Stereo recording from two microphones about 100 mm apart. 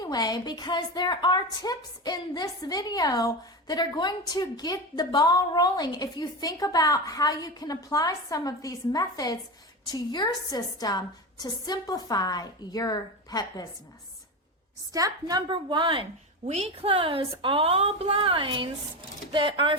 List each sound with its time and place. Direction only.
0.0 s a woman's voice: 40° left (ahead or behind)
14.9 s a woman's voice: 35° right (ahead or behind)
15.4 s speech: 55° right (ahead or behind)
16.6 s a woman's voice: 70° right (ahead or behind); by 19.7 s 55° right (ahead or behind)